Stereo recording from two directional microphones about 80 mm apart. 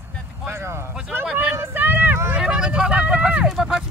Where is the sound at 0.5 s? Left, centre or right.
Right.